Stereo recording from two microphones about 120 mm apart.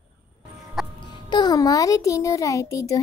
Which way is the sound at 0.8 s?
5° right (ahead or behind).